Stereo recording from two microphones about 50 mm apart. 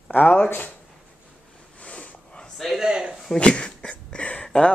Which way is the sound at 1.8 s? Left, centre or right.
Left.